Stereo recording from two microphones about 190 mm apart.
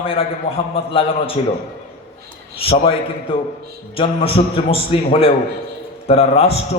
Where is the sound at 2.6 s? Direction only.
30° left (ahead or behind).